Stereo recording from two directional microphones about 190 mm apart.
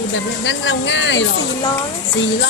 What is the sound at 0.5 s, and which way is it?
Speech, 75° left (ahead or behind).